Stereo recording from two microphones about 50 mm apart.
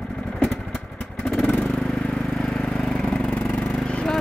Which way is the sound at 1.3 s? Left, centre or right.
Centre.